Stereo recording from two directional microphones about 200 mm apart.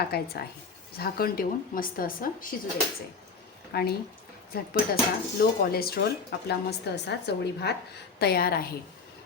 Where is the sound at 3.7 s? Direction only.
50° left (ahead or behind).